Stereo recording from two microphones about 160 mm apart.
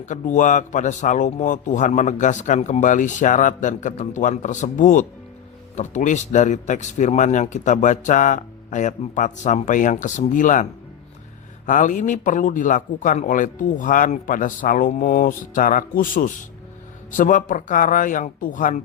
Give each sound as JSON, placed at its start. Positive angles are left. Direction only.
{"t": 0.0, "sound": "a man's voice", "side_deg": 50}